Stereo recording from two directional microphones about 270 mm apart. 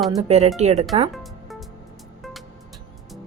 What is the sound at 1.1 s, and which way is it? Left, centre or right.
Music, centre.